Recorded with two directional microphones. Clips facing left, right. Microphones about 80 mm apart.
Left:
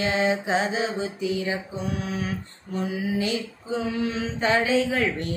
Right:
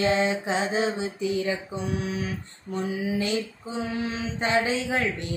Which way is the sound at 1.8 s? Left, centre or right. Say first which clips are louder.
Even; left.